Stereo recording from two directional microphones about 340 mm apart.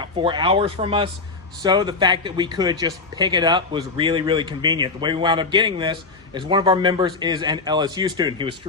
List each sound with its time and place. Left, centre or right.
0.0 s speech: centre